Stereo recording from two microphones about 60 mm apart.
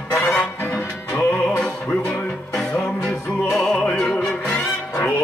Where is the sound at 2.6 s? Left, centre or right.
Centre.